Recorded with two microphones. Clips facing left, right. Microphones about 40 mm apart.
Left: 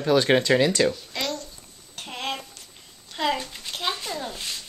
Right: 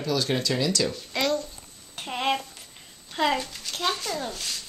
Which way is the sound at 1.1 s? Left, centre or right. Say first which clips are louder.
Right 4 dB; centre.